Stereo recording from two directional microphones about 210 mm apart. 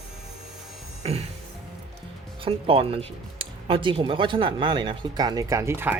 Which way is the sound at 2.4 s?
25° right (ahead or behind).